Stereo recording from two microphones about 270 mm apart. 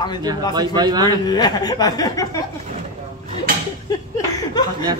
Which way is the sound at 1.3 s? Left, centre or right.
Centre.